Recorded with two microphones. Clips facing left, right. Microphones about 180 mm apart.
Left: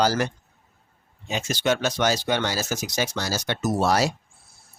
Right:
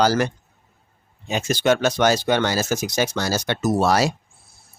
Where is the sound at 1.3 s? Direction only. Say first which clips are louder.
Right 5 dB; 50° right (ahead or behind); by 4.1 s 75° right (ahead or behind).